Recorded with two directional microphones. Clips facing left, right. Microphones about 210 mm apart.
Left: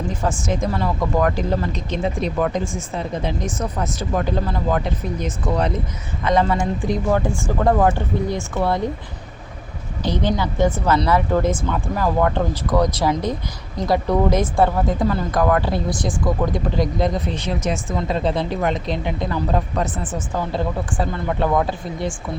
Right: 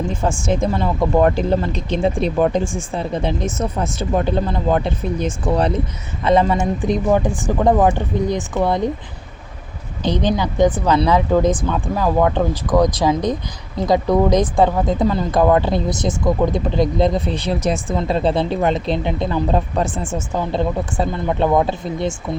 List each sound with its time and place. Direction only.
0.2 s speech: 30° right (ahead or behind)
10.0 s speech: 20° right (ahead or behind)